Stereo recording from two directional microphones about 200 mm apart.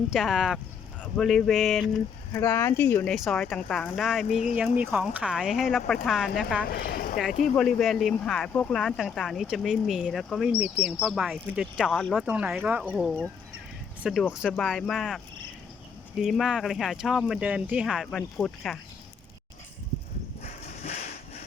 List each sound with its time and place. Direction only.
0.1 s speech: centre (ahead or behind)
2.3 s speech: 10° left (ahead or behind)
4.3 s speech: 35° left (ahead or behind)
4.8 s speech: 5° right (ahead or behind)
6.7 s speech: 50° left (ahead or behind)
7.4 s speech: 5° left (ahead or behind)
16.2 s speech: centre (ahead or behind)
20.8 s a sound: 35° left (ahead or behind)